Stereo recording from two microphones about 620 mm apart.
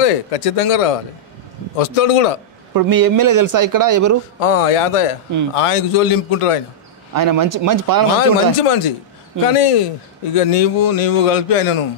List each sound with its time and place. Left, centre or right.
0.0 s a man's voice: left
2.7 s speech: right
4.4 s a man's voice: left
7.2 s speech: right
8.5 s a man's voice: left